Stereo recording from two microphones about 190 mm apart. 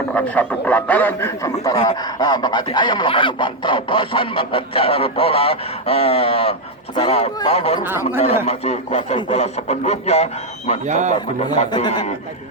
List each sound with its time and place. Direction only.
0.1 s a man's voice: 10° left (ahead or behind)
2.0 s speech: 20° left (ahead or behind)
7.9 s speech: 10° right (ahead or behind)
8.4 s speech: 35° left (ahead or behind)
10.8 s a man's voice: 40° right (ahead or behind)
11.4 s speech: 20° left (ahead or behind)